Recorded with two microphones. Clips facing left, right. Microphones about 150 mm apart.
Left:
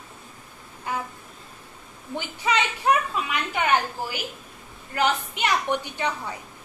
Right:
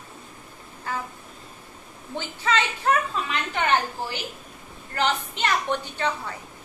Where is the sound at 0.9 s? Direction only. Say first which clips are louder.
Left 1 dB; 15° left (ahead or behind).